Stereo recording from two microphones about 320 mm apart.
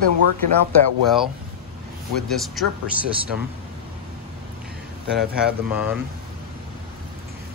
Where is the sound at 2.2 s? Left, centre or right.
Centre.